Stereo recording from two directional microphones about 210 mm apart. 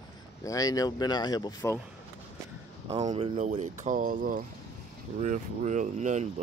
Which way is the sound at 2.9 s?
25° right (ahead or behind).